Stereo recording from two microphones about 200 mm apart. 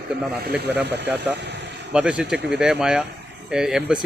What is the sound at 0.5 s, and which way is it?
Speech, 10° right (ahead or behind).